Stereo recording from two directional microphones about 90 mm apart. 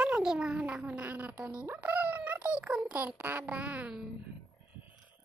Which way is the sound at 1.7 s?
15° right (ahead or behind).